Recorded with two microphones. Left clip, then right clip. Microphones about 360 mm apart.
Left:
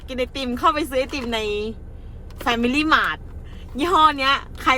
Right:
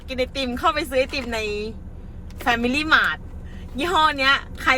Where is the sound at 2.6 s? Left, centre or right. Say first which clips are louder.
Left 1 dB; centre.